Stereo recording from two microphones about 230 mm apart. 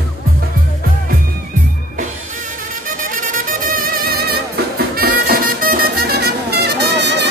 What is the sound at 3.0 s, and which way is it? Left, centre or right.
Music, right.